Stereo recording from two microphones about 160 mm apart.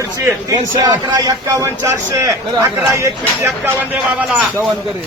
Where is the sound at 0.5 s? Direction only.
25° right (ahead or behind).